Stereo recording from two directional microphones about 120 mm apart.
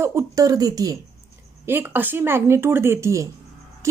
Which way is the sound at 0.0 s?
25° right (ahead or behind).